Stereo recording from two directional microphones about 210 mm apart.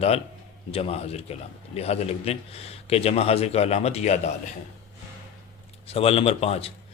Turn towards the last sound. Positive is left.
turn(degrees=30)  # may be behind; listen again after turning